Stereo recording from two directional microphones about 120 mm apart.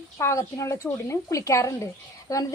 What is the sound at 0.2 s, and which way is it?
A woman's voice, 25° left (ahead or behind).